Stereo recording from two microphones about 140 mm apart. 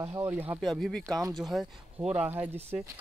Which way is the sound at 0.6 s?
Centre (ahead or behind).